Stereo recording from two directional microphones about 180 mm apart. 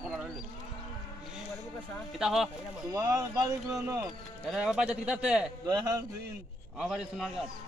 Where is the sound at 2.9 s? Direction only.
20° right (ahead or behind).